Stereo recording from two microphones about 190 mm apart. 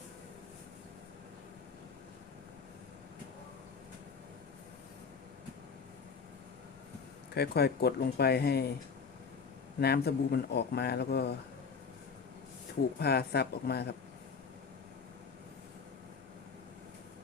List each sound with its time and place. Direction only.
7.3 s speech: 60° left (ahead or behind)
9.8 s speech: 60° left (ahead or behind)
13.0 s speech: 60° left (ahead or behind)